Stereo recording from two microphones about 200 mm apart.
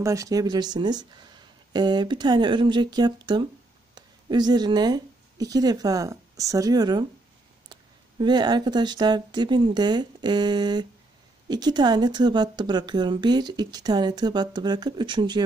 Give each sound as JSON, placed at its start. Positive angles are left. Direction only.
{"t": 0.0, "sound": "a woman's voice", "side_deg": -15}